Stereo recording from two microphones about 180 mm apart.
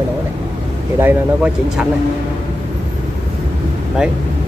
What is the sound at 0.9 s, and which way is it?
Speech, 10° right (ahead or behind).